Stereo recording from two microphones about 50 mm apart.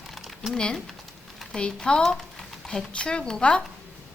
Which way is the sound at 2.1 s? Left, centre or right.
Centre.